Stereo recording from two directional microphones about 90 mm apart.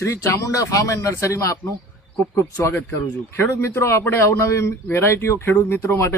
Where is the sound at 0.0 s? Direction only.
35° left (ahead or behind).